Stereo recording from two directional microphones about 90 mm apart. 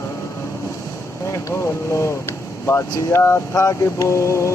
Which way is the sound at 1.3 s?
35° left (ahead or behind).